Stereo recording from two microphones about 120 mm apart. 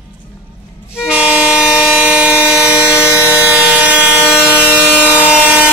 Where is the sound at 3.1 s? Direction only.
20° left (ahead or behind).